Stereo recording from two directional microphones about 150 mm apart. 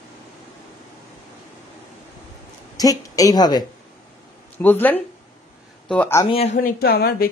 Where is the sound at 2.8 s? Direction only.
25° left (ahead or behind).